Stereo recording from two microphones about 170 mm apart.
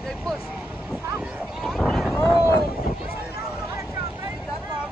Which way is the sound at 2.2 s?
20° left (ahead or behind).